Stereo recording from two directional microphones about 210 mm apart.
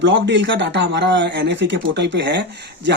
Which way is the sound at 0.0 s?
60° right (ahead or behind).